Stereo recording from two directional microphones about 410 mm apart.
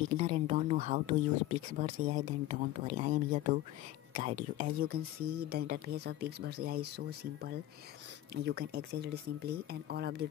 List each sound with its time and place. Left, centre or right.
0.2 s speech: centre